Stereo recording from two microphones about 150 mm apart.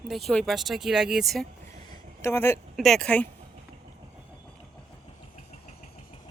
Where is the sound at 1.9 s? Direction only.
15° left (ahead or behind).